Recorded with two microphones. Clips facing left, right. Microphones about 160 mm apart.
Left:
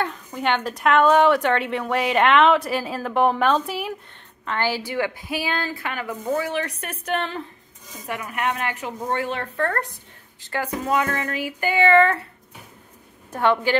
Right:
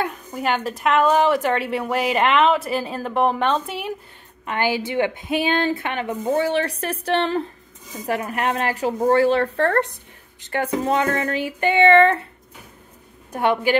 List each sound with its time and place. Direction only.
0.0 s a woman's voice: 5° right (ahead or behind)
4.5 s a woman's voice: 15° right (ahead or behind)
13.3 s speech: 15° right (ahead or behind)